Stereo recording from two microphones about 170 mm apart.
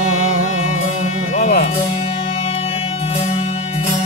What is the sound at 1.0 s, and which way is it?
Music, 45° left (ahead or behind).